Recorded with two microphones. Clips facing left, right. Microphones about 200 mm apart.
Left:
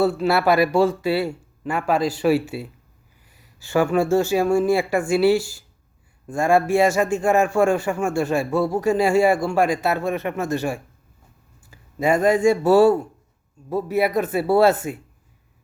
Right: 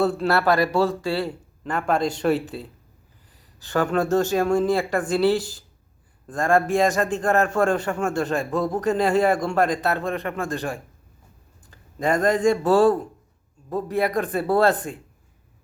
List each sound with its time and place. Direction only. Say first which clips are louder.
0.0 s a man's voice: left 2 dB; 5° left (ahead or behind)